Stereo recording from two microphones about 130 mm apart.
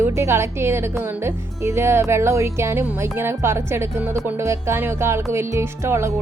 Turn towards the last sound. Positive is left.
turn(degrees=-20)  # may be behind; listen again after turning